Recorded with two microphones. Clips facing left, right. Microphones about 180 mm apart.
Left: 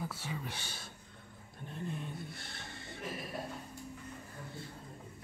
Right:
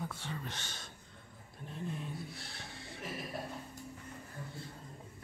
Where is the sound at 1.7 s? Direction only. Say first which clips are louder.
Even; centre (ahead or behind).